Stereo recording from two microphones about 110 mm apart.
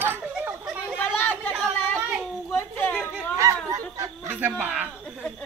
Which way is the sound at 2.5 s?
20° left (ahead or behind).